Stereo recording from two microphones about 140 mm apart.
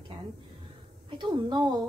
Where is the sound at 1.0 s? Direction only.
35° right (ahead or behind).